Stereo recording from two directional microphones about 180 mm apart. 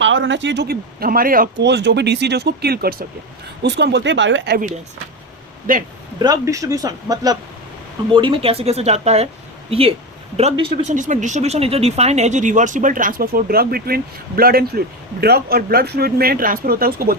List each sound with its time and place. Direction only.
0.0 s speech: 90° right; by 1.6 s 50° right (ahead or behind)
1.6 s speech: 75° right (ahead or behind)
3.6 s speech: 70° right (ahead or behind)
5.7 s speech: 50° right (ahead or behind)
6.1 s speech: 20° right (ahead or behind); by 17.2 s 55° right (ahead or behind)